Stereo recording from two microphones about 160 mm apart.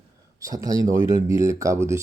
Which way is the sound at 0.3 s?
20° right (ahead or behind).